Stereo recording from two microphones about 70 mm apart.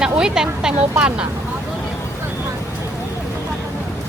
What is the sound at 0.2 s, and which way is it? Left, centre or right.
Speech, centre.